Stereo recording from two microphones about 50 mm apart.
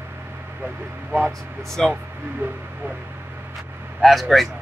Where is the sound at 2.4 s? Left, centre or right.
Right.